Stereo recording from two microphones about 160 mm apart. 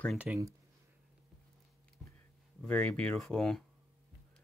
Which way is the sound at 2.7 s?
10° left (ahead or behind).